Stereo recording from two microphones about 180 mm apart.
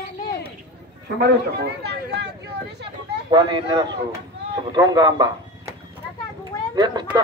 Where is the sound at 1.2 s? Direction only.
60° right (ahead or behind).